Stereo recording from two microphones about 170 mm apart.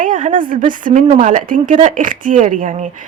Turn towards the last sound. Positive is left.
turn(degrees=-50)  # may be behind; listen again after turning